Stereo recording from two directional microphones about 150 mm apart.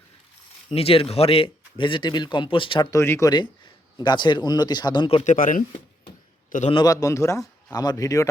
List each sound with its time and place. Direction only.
0.7 s speech: 40° left (ahead or behind)
2.9 s speech: 20° left (ahead or behind)
5.2 s speech: 60° left (ahead or behind)
6.7 s speech: 30° left (ahead or behind)